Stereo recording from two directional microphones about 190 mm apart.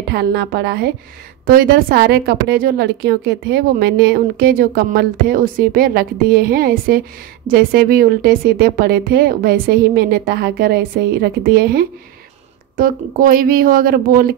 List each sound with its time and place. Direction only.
0.1 s a woman's voice: 60° right (ahead or behind)